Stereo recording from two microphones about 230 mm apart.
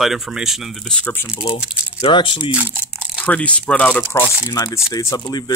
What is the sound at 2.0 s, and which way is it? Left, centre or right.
Speech, left.